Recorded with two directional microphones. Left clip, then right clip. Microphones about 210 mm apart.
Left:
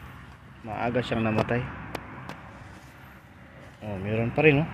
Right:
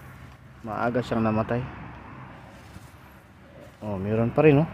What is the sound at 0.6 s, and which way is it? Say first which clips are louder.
Speech: right 2 dB; 25° right (ahead or behind).